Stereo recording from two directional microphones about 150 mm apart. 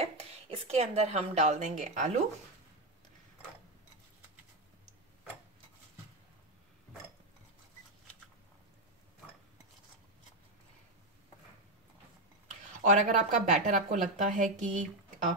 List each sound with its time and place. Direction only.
0.0 s speech: 45° right (ahead or behind)
12.8 s speech: 55° right (ahead or behind)